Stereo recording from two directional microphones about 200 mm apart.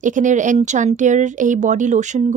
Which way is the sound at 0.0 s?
40° right (ahead or behind).